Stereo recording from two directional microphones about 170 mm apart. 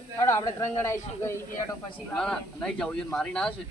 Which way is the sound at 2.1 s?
5° left (ahead or behind).